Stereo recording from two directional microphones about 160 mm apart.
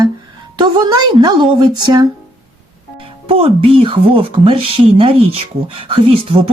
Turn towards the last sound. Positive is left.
turn(degrees=-35)  # may be behind; listen again after turning